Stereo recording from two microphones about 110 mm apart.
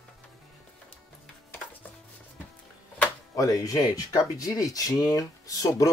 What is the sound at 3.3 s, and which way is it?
Speech, 30° left (ahead or behind).